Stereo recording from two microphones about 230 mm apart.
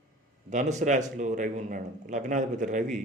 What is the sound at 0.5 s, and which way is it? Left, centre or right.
Speech, right.